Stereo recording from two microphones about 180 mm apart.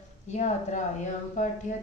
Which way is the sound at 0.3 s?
40° left (ahead or behind).